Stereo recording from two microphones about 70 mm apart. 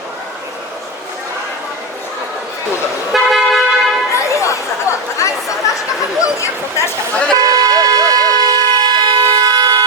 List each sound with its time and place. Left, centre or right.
3.1 s toot: centre
4.1 s chatter: left
6.2 s speech: left
7.3 s a sound: right
9.2 s siren: right